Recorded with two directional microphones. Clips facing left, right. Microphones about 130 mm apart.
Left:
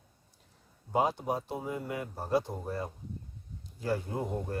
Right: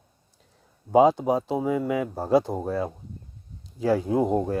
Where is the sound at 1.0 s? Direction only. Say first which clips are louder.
Right 11 dB; 90° right.